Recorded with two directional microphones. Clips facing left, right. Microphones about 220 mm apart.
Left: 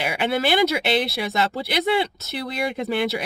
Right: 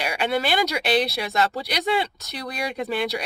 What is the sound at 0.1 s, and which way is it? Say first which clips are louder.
Speech: left 2 dB; 5° left (ahead or behind).